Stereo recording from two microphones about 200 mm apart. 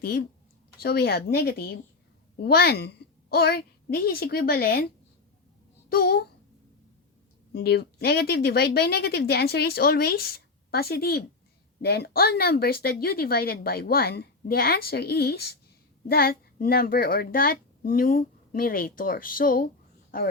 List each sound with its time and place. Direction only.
0.0 s a woman's voice: 55° left (ahead or behind)
5.9 s speech: 50° left (ahead or behind)
7.5 s speech: 55° left (ahead or behind)